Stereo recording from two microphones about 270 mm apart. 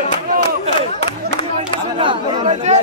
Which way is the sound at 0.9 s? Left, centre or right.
Left.